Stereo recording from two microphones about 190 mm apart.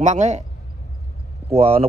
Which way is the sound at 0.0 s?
40° right (ahead or behind).